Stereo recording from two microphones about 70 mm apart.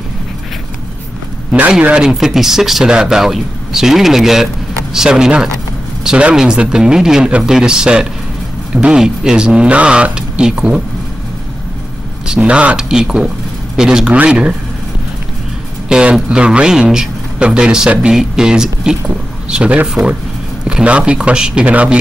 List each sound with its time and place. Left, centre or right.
1.8 s speech: centre
2.0 s a man's voice: centre
12.3 s a man's voice: centre
15.9 s a man's voice: centre